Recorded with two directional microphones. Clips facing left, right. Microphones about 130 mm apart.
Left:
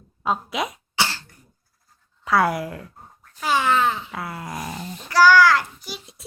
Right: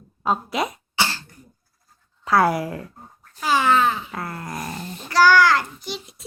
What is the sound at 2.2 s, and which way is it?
Speech, centre (ahead or behind).